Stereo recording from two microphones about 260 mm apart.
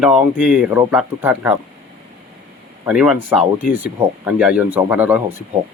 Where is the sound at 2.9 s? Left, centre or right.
Centre.